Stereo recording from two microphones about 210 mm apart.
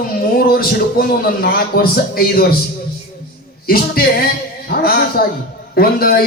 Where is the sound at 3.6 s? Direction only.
45° left (ahead or behind).